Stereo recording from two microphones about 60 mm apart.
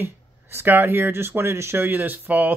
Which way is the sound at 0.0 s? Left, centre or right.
Right.